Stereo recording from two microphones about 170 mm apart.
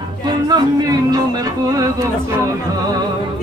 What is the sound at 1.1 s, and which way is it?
Music, 20° right (ahead or behind).